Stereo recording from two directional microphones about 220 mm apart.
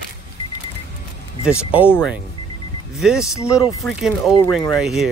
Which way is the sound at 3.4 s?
15° left (ahead or behind).